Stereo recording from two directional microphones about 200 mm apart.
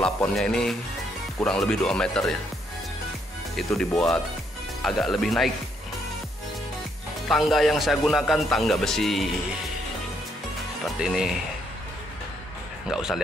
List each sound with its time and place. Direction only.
0.0 s a man's voice: 5° left (ahead or behind)
3.7 s a man's voice: centre (ahead or behind)
7.2 s a man's voice: centre (ahead or behind)
11.0 s a man's voice: centre (ahead or behind)
12.8 s a man's voice: 5° right (ahead or behind)